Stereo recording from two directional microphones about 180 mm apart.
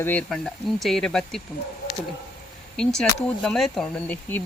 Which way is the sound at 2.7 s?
5° left (ahead or behind).